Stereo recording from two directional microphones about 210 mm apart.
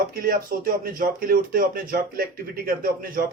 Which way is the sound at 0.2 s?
45° right (ahead or behind).